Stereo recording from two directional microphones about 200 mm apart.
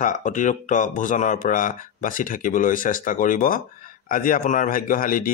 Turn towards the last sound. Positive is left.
turn(degrees=45)  # may be behind; listen again after turning